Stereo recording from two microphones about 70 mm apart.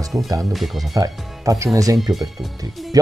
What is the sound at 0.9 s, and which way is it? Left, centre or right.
Speech, right.